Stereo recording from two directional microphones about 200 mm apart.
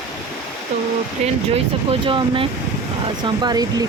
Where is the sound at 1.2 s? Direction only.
30° right (ahead or behind).